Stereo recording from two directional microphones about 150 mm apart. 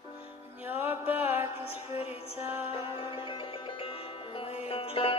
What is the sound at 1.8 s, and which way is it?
Music, 45° left (ahead or behind).